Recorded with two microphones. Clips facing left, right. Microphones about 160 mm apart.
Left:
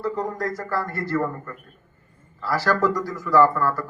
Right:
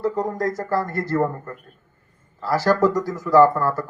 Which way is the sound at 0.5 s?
25° right (ahead or behind).